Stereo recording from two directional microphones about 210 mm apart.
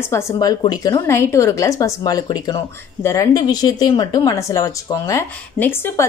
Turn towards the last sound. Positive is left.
turn(degrees=15)  # may be behind; listen again after turning